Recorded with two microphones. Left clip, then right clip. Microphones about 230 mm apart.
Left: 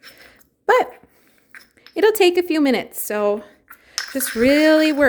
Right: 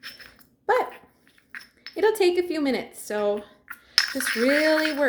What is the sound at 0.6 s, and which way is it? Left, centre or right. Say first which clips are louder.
Dog: left 7 dB; left.